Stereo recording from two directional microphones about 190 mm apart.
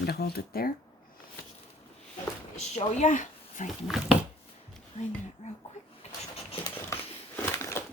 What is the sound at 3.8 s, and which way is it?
Speech, centre (ahead or behind).